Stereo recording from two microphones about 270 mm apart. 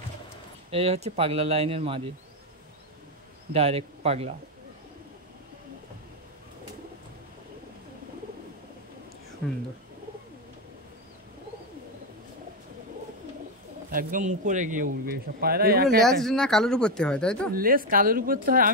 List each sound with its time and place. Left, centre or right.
0.7 s speech: right
3.5 s speech: right
13.8 s speech: right
16.0 s speech: centre
17.6 s speech: right